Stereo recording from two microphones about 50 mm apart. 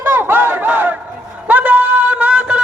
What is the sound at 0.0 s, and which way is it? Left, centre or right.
Battle cry, right.